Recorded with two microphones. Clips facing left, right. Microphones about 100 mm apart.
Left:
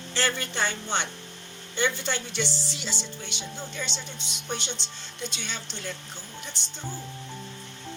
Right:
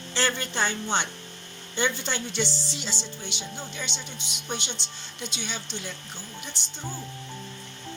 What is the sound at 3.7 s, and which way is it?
Speech, 5° right (ahead or behind).